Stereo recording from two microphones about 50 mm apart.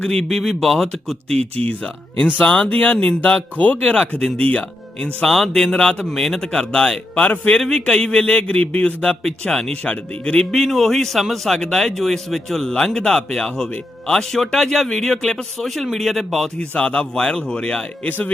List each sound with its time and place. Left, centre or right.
0.0 s a man's voice: centre
0.3 s speech: centre
2.4 s a man's voice: left
2.6 s a man's voice: left
5.2 s speech: centre
5.7 s speech: centre
7.2 s a man's voice: left
7.7 s a man's voice: centre
10.7 s speech: centre
16.6 s a man's voice: left